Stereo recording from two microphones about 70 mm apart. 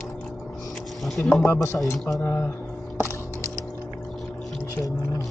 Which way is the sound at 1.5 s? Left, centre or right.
Left.